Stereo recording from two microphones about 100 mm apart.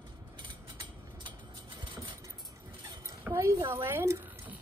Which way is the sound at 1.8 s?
50° right (ahead or behind).